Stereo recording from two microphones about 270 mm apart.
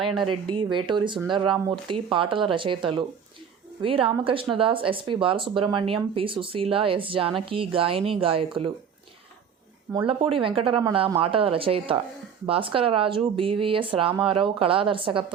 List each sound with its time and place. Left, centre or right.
0.2 s speech: centre
9.9 s speech: centre